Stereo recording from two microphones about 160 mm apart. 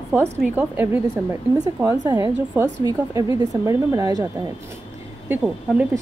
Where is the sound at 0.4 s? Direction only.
10° right (ahead or behind).